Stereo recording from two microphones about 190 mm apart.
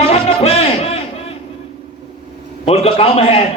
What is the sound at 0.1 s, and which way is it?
Music, 30° left (ahead or behind).